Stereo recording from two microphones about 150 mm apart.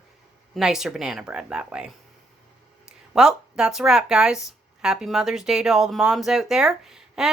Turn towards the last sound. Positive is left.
turn(degrees=-5)  # may be behind; listen again after turning